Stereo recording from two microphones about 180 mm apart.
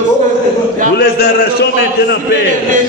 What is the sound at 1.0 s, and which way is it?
A man's voice, 65° left (ahead or behind).